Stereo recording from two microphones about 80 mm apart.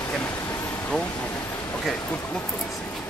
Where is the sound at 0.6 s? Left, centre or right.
Left.